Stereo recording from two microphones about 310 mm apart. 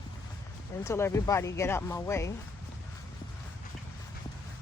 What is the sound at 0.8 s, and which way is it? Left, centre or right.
Speech, centre.